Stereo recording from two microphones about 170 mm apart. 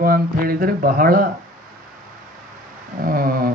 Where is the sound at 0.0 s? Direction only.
60° right (ahead or behind).